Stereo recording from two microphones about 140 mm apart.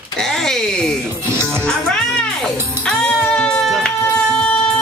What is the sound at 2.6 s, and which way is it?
Speech, 20° right (ahead or behind).